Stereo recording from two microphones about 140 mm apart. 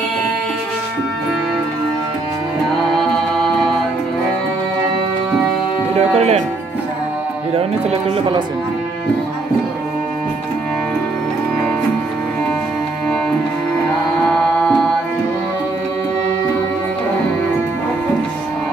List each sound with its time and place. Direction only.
5.9 s music: 50° right (ahead or behind)
14.2 s music: 10° left (ahead or behind)